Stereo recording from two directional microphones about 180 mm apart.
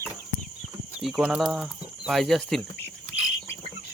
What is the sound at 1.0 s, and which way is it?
Speech, centre (ahead or behind).